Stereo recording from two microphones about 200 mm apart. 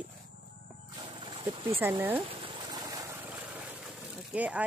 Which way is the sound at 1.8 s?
10° right (ahead or behind).